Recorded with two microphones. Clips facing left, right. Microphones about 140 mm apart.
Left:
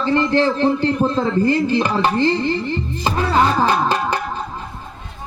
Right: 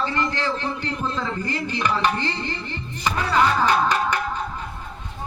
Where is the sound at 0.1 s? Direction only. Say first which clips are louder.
Left 9 dB; 30° left (ahead or behind).